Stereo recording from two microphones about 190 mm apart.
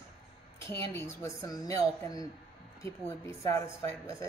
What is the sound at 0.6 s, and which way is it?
Speech, 15° left (ahead or behind).